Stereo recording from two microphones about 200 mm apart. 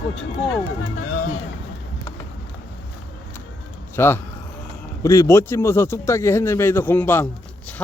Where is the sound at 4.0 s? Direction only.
10° left (ahead or behind).